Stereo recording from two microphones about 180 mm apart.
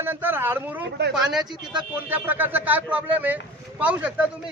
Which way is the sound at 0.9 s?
70° right (ahead or behind).